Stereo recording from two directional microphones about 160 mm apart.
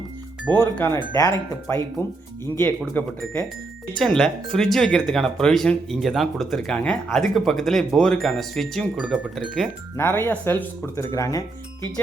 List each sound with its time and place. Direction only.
0.5 s speech: 15° left (ahead or behind)
2.9 s speech: 10° left (ahead or behind); by 9.6 s 5° right (ahead or behind)
10.0 s speech: 10° left (ahead or behind)